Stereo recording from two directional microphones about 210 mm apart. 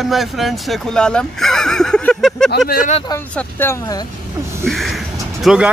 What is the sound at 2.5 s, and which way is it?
Speech, 45° left (ahead or behind).